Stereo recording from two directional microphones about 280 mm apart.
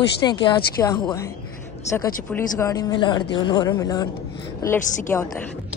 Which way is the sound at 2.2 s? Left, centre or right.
Centre.